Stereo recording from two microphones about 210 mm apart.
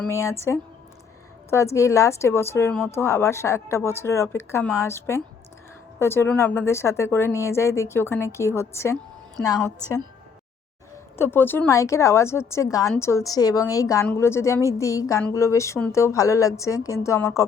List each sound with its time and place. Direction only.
0.1 s a woman's voice: 15° left (ahead or behind)